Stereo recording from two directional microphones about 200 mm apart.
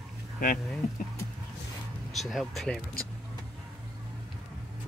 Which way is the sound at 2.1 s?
Centre (ahead or behind).